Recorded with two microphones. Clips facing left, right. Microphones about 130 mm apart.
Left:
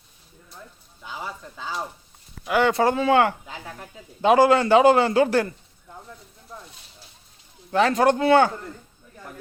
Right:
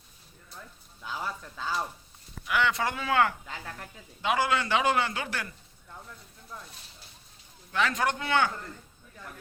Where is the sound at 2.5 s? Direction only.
35° left (ahead or behind).